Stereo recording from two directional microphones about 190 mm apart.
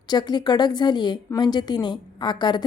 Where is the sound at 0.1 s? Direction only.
20° left (ahead or behind).